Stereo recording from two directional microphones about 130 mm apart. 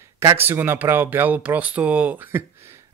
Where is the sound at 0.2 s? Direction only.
20° right (ahead or behind).